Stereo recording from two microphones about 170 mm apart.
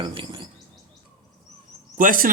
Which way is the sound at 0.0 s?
30° right (ahead or behind).